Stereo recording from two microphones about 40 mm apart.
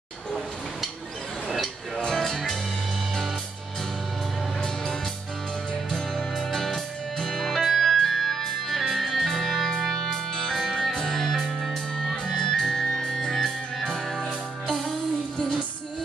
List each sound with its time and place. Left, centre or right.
2.1 s music: centre
6.5 s music: centre
10.3 s music: centre
10.6 s music: centre